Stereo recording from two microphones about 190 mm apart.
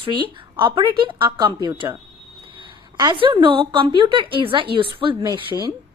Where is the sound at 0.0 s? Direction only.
25° right (ahead or behind).